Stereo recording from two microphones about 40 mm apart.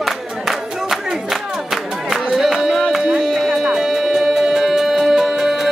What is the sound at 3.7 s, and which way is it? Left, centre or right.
Music, centre.